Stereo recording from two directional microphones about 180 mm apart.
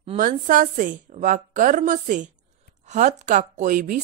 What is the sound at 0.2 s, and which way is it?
Speech, 50° right (ahead or behind).